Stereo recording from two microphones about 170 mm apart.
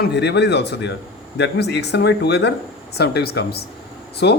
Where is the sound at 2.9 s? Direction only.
70° left (ahead or behind).